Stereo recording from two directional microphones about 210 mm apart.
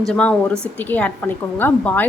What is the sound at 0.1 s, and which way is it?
A woman's voice, 5° left (ahead or behind).